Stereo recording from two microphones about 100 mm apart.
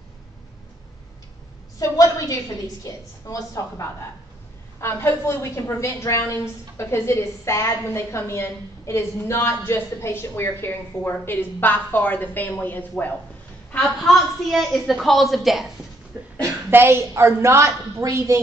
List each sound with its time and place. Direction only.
1.8 s a woman's voice: 35° left (ahead or behind); by 13.1 s 20° left (ahead or behind)
13.7 s a woman's voice: 5° left (ahead or behind)
16.4 s a woman's voice: 25° right (ahead or behind)